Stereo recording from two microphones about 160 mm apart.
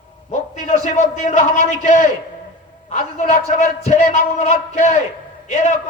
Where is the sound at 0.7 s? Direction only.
45° left (ahead or behind).